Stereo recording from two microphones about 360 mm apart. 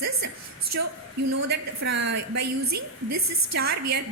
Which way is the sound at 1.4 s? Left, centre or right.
Right.